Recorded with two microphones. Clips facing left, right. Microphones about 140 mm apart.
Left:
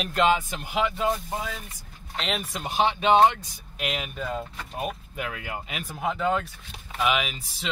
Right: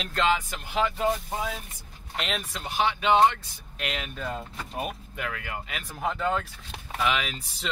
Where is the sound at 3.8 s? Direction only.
10° left (ahead or behind).